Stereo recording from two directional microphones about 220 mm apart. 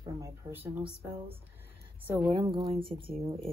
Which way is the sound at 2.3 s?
20° right (ahead or behind).